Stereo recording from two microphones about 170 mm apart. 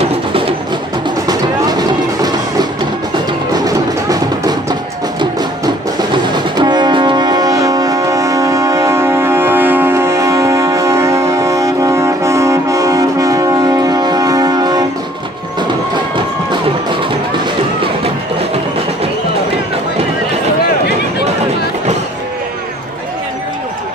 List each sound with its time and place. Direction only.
0.0 s a sound: 35° right (ahead or behind)
1.2 s music: 25° right (ahead or behind)
3.5 s music: 25° right (ahead or behind)
5.9 s music: 25° right (ahead or behind)